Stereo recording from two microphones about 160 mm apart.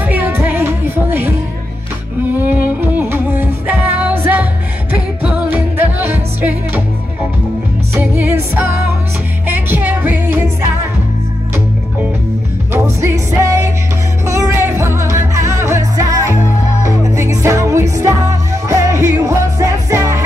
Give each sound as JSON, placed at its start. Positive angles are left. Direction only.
{"t": 0.0, "sound": "music", "side_deg": -10}
{"t": 2.8, "sound": "music", "side_deg": -10}
{"t": 7.9, "sound": "music", "side_deg": -15}
{"t": 9.7, "sound": "music", "side_deg": -10}
{"t": 12.7, "sound": "music", "side_deg": -15}